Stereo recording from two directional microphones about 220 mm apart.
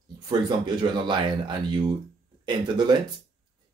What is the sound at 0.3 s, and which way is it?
Speech, 20° right (ahead or behind).